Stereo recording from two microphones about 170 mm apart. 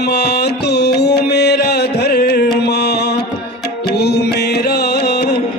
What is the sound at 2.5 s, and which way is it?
Mantra, 75° left (ahead or behind).